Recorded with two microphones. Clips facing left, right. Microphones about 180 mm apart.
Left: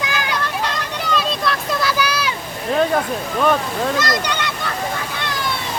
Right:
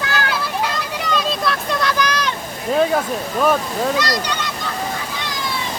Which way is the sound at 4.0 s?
50° left (ahead or behind).